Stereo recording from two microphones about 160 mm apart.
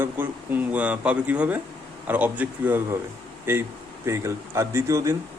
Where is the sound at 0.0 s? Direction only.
10° right (ahead or behind).